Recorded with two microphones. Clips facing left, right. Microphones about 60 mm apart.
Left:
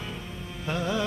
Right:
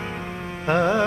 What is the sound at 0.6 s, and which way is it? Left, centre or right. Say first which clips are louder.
Music: right 9 dB; right.